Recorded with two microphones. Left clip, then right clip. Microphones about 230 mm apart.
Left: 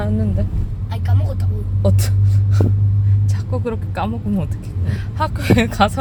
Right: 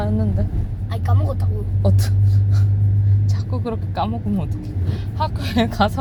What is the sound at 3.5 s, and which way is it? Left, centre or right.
Speech, left.